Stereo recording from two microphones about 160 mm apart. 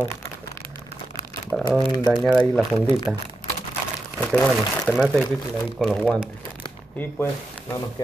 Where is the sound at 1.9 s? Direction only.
25° left (ahead or behind).